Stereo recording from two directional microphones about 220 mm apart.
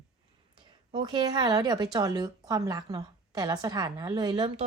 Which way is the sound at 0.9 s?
20° right (ahead or behind).